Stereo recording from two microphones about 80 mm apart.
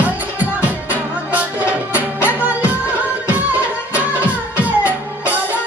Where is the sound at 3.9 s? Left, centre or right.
Centre.